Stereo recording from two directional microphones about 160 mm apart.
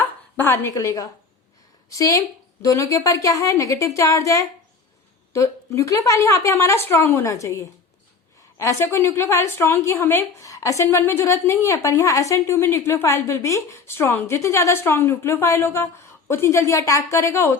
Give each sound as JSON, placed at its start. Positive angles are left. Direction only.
{"t": 0.3, "sound": "a woman's voice", "side_deg": 15}